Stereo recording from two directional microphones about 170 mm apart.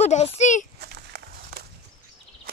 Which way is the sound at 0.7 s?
70° right (ahead or behind).